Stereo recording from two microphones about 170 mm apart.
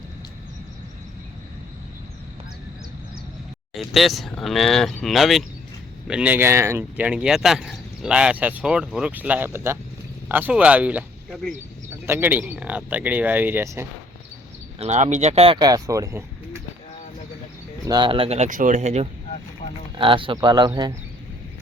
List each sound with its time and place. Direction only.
3.8 s speech: centre (ahead or behind)
14.8 s speech: 45° right (ahead or behind); by 16.6 s 15° right (ahead or behind)
17.8 s speech: 25° right (ahead or behind); by 19.0 s 40° right (ahead or behind)
19.6 s a sound: 45° left (ahead or behind)
20.0 s speech: 30° right (ahead or behind)